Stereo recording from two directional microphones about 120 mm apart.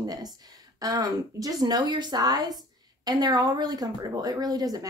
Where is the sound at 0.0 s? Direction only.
35° right (ahead or behind).